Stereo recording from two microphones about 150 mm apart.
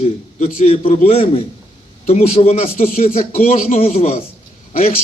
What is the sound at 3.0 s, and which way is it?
Speech, 65° left (ahead or behind).